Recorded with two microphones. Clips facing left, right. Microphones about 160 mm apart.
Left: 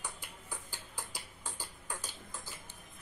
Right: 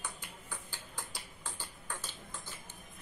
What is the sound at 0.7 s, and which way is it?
Tick-tock, 10° left (ahead or behind).